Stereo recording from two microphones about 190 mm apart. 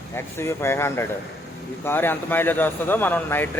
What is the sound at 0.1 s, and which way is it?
Speech, 10° left (ahead or behind).